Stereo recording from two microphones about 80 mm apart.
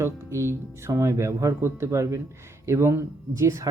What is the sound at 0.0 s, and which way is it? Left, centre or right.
Speech, right.